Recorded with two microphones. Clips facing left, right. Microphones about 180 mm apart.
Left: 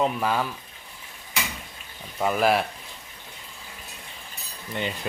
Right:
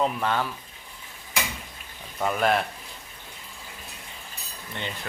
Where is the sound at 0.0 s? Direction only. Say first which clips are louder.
Left 1 dB; 5° left (ahead or behind).